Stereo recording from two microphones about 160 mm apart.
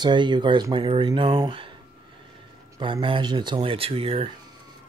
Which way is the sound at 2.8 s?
30° right (ahead or behind).